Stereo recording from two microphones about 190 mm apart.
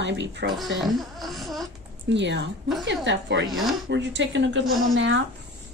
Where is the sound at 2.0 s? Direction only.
70° right (ahead or behind).